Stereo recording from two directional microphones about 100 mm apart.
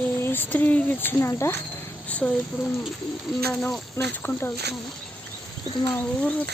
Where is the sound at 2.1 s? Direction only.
15° left (ahead or behind).